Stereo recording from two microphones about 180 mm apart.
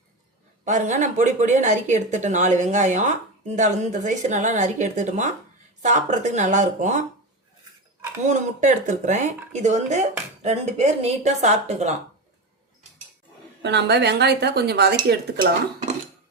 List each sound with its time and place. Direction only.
0.6 s speech: 40° right (ahead or behind)
8.2 s speech: 40° right (ahead or behind)
13.6 s speech: 70° right (ahead or behind)